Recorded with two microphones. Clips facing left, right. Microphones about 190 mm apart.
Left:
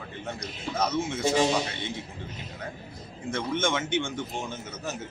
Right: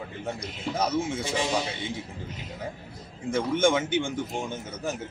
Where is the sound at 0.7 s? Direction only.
10° right (ahead or behind).